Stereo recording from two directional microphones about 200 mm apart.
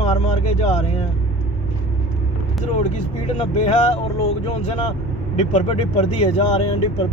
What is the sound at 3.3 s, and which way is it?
Speech, 35° left (ahead or behind).